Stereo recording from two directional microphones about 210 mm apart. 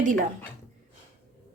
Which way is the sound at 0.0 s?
35° right (ahead or behind).